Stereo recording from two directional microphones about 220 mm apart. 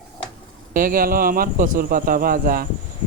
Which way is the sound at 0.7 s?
40° right (ahead or behind).